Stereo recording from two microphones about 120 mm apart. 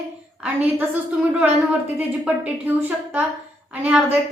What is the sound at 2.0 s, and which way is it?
A woman's voice, 15° right (ahead or behind).